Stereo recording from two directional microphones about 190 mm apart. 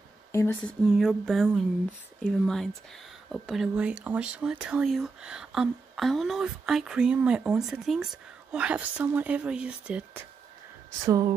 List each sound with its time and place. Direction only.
0.3 s speech: 15° left (ahead or behind)
0.8 s speech: centre (ahead or behind)
11.1 s speech: 20° right (ahead or behind)